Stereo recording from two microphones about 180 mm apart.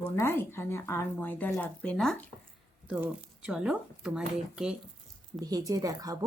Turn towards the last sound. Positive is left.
turn(degrees=-20)  # may be behind; listen again after turning